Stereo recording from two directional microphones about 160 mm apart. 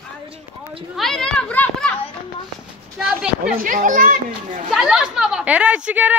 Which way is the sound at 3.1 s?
5° right (ahead or behind).